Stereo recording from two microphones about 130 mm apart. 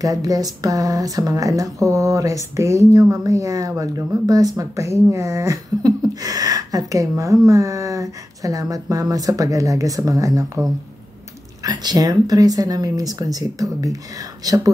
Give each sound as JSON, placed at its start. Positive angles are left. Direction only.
{"t": 0.0, "sound": "speech", "side_deg": -25}
{"t": 11.6, "sound": "speech", "side_deg": -30}